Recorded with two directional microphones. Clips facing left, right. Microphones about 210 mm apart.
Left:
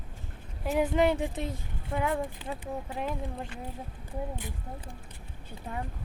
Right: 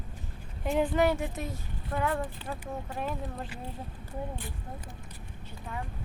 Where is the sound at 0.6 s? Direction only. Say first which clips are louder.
Even; 5° left (ahead or behind).